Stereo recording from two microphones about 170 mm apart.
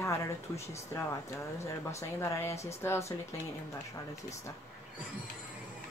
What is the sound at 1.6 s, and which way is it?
Speech, 15° left (ahead or behind).